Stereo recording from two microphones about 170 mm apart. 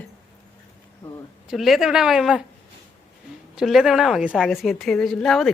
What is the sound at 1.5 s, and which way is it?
Speech, centre (ahead or behind).